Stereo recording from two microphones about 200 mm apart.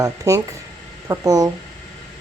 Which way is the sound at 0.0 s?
15° right (ahead or behind).